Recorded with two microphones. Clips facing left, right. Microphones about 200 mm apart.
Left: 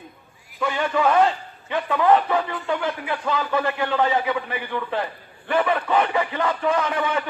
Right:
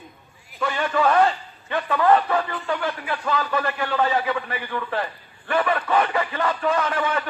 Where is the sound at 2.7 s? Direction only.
20° left (ahead or behind).